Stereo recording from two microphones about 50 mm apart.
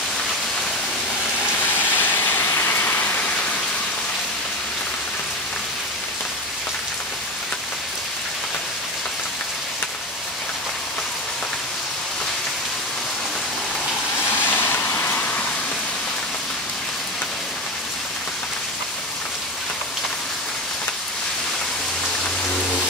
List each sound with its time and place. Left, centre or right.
1.8 s vehicle: left
2.6 s rain: left
14.4 s a sound: left